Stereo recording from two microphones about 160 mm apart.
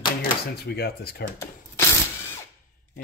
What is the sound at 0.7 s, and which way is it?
Speech, 80° left.